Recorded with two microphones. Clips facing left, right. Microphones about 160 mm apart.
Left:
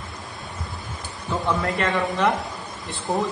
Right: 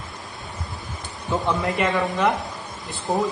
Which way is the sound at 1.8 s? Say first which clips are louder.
Right 1 dB; centre (ahead or behind).